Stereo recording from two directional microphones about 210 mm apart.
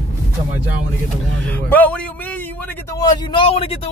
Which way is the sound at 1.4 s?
10° left (ahead or behind).